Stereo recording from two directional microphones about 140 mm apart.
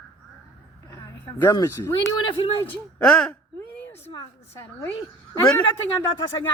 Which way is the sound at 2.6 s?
10° left (ahead or behind).